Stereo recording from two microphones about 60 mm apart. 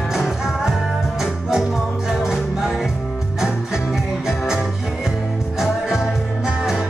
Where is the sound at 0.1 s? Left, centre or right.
Centre.